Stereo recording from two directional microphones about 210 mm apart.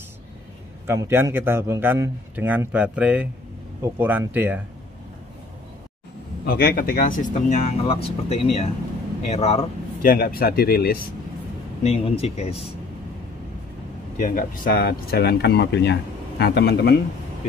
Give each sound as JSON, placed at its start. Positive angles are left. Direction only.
{"t": 0.8, "sound": "a man's voice", "side_deg": -10}
{"t": 6.4, "sound": "speech", "side_deg": 45}
{"t": 10.0, "sound": "speech", "side_deg": 45}
{"t": 11.8, "sound": "speech", "side_deg": 30}
{"t": 14.1, "sound": "speech", "side_deg": 40}